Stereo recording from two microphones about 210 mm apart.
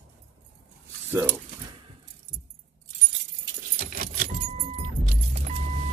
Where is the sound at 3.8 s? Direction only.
40° right (ahead or behind).